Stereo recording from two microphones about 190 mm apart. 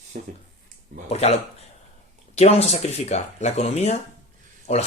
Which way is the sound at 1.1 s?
35° left (ahead or behind).